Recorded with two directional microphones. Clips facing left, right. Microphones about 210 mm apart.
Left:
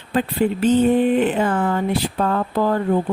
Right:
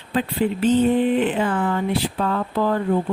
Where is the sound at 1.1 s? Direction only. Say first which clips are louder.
Left 2 dB; 45° left (ahead or behind).